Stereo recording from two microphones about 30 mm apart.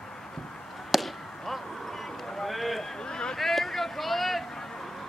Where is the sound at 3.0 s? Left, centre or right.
Left.